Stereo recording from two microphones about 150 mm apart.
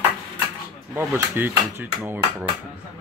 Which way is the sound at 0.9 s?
15° right (ahead or behind).